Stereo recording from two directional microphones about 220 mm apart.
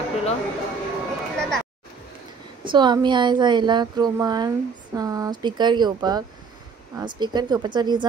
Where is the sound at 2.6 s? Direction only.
20° right (ahead or behind).